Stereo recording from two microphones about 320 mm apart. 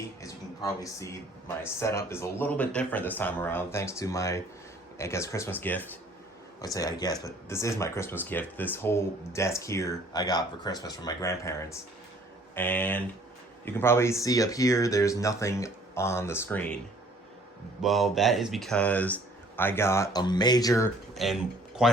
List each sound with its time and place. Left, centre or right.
0.2 s speech: centre
17.8 s speech: centre